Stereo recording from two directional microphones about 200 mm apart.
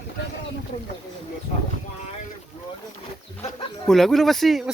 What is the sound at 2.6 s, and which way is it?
Vehicle, 30° left (ahead or behind).